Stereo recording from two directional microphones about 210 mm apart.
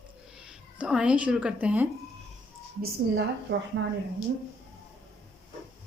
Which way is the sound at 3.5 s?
65° right (ahead or behind).